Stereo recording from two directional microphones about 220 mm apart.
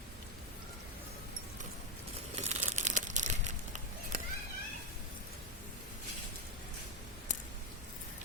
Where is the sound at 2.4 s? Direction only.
30° right (ahead or behind).